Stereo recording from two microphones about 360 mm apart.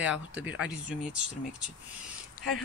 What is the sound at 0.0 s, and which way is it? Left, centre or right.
Speech, centre.